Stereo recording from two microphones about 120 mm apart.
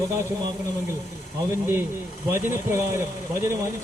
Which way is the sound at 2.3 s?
20° right (ahead or behind).